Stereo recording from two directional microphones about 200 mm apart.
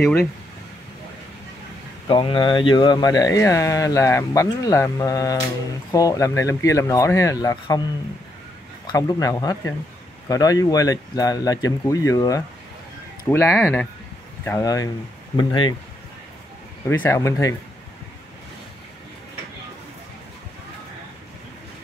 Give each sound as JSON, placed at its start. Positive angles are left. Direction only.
{"t": 0.0, "sound": "speech", "side_deg": 10}
{"t": 2.0, "sound": "speech", "side_deg": 25}
{"t": 8.8, "sound": "speech", "side_deg": 15}
{"t": 17.0, "sound": "speech", "side_deg": 15}